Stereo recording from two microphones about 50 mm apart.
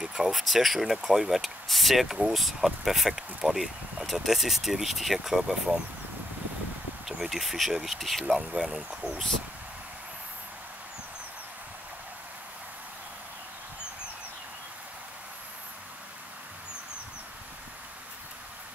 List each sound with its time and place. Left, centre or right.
0.0 s a sound: centre
0.3 s speech: centre
7.1 s speech: centre
8.4 s speech: centre